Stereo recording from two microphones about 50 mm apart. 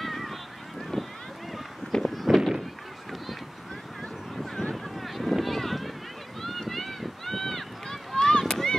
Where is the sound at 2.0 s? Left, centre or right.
Centre.